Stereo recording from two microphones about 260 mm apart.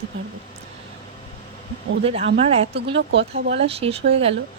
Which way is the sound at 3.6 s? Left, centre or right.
Right.